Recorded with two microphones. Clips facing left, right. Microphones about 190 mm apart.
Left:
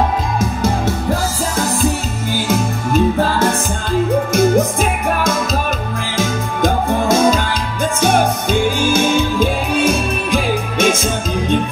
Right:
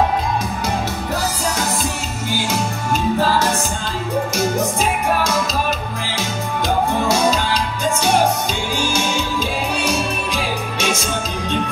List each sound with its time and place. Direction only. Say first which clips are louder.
4.3 s music: left 8 dB; 55° left (ahead or behind)
6.1 s music: left 4 dB; 50° left (ahead or behind)